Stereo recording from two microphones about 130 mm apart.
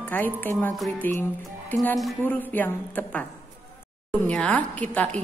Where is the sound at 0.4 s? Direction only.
15° left (ahead or behind).